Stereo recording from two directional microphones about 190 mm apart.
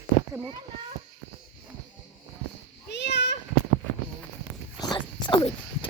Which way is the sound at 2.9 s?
65° left (ahead or behind).